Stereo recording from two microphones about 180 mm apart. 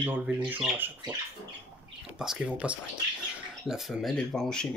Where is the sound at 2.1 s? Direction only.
5° right (ahead or behind).